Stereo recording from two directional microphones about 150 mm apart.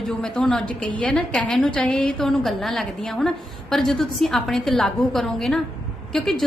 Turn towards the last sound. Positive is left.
turn(degrees=0)  # may be behind; listen again after turning